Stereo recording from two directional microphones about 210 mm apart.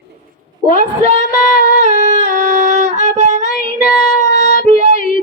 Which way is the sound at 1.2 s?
45° left (ahead or behind).